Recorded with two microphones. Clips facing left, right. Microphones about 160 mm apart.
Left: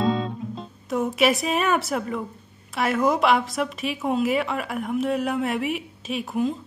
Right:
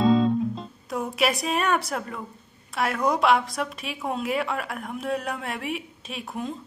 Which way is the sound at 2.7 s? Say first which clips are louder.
Left 3 dB; centre (ahead or behind).